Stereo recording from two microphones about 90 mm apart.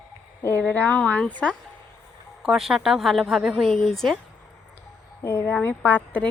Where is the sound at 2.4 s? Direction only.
5° right (ahead or behind).